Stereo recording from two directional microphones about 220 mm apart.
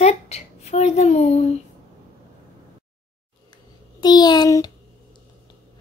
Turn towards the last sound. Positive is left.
turn(degrees=15)  # may be behind; listen again after turning